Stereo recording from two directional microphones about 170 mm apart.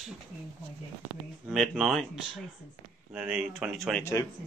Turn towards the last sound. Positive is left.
turn(degrees=15)  # may be behind; listen again after turning